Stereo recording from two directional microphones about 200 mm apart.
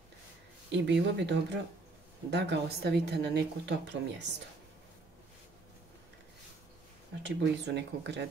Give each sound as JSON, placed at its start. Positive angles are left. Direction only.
{"t": 0.7, "sound": "a woman's voice", "side_deg": -60}
{"t": 7.2, "sound": "a woman's voice", "side_deg": -60}